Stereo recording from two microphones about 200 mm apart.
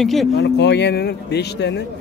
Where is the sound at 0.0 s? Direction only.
Centre (ahead or behind).